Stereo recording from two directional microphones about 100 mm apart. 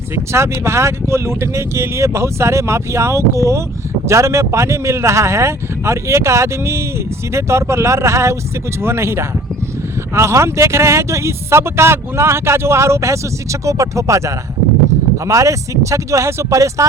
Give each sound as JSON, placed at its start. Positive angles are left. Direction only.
{"t": 0.3, "sound": "speech", "side_deg": -25}